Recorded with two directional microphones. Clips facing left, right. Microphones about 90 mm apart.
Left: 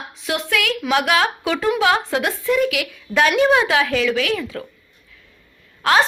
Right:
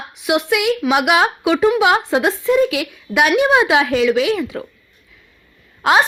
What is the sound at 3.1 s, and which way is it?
A woman's voice, 15° right (ahead or behind).